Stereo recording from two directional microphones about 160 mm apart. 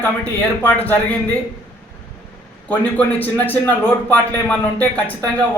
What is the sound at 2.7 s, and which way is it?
A man's voice, 10° left (ahead or behind).